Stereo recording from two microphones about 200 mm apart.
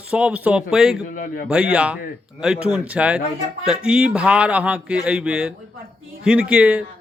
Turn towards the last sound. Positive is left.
turn(degrees=-5)  # may be behind; listen again after turning